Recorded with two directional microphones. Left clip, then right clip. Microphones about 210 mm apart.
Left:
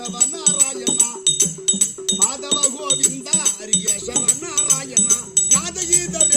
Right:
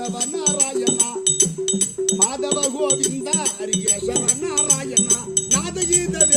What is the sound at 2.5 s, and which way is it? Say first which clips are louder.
Music: even; 15° left (ahead or behind).